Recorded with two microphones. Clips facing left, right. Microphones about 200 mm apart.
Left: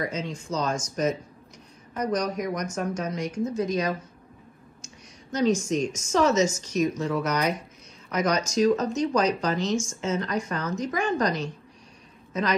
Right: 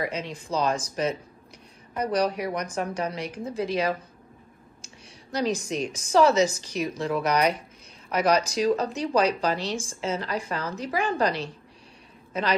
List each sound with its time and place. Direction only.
0.2 s speech: 35° right (ahead or behind)
2.0 s speech: 35° right (ahead or behind)